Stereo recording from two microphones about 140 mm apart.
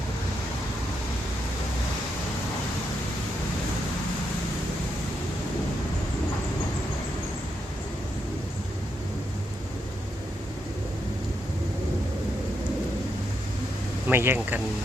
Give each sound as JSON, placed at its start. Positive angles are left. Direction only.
{"t": 14.1, "sound": "speech", "side_deg": -15}